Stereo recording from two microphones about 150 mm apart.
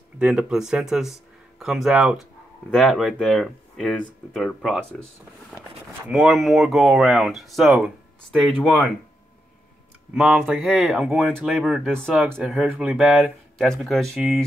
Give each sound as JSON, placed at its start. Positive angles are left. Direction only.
{"t": 0.2, "sound": "speech", "side_deg": -5}
{"t": 6.0, "sound": "speech", "side_deg": 0}
{"t": 10.1, "sound": "speech", "side_deg": -5}